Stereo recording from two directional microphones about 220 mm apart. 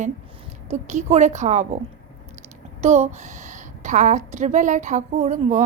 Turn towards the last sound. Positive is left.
turn(degrees=-35)  # may be behind; listen again after turning